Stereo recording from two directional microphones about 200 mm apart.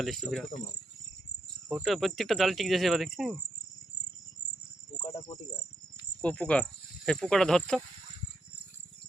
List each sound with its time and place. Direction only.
0.0 s speech: centre (ahead or behind)
1.7 s speech: centre (ahead or behind)
6.2 s speech: 5° left (ahead or behind)